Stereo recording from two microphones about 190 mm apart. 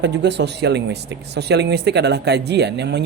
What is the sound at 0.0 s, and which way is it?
Speech, 65° right (ahead or behind).